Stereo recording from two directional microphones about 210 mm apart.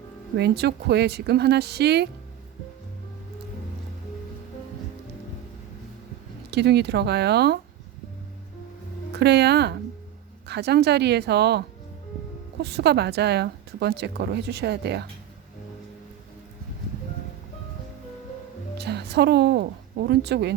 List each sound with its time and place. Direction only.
0.3 s a woman's voice: 50° right (ahead or behind)
6.5 s a woman's voice: 50° right (ahead or behind)
9.1 s a woman's voice: 50° right (ahead or behind)
12.6 s a woman's voice: 50° right (ahead or behind)
18.8 s a woman's voice: 50° right (ahead or behind)